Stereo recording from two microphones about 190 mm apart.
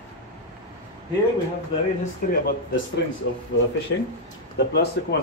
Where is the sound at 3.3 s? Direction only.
65° left (ahead or behind).